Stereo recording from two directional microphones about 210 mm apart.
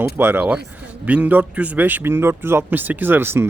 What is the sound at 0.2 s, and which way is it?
Speech, 10° right (ahead or behind).